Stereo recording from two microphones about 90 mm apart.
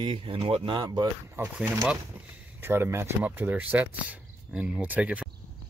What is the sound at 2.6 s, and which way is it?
Speech, 25° right (ahead or behind).